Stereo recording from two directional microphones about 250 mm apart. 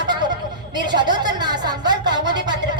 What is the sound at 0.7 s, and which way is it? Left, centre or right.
Speech, centre.